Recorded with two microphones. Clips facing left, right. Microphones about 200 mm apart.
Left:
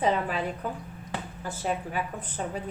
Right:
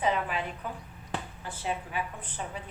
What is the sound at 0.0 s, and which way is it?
A woman's voice, 35° left (ahead or behind).